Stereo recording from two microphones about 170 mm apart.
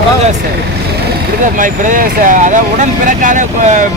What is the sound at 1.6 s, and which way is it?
Speech, 50° right (ahead or behind).